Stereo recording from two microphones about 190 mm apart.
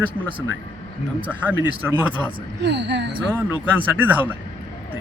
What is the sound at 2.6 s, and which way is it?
Speech, 65° right (ahead or behind).